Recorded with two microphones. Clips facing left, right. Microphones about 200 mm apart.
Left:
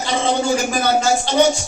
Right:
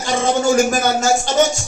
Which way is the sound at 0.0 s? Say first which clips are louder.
Right 2 dB; 45° right (ahead or behind).